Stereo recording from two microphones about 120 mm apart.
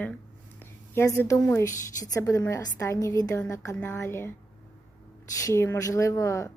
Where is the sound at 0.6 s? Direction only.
20° left (ahead or behind).